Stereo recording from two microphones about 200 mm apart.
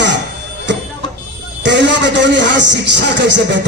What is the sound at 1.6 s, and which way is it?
Speech, 65° right (ahead or behind).